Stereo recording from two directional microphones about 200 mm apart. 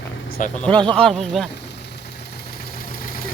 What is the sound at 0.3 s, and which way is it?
Vehicle, 45° left (ahead or behind).